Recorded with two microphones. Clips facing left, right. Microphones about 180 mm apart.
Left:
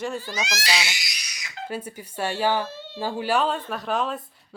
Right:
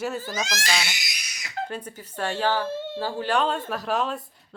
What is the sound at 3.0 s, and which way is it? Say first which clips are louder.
Speech: left 2 dB; 15° left (ahead or behind).